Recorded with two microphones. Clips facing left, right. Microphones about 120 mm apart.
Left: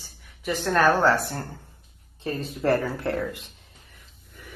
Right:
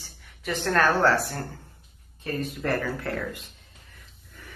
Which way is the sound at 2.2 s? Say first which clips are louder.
Left 2 dB; 30° left (ahead or behind).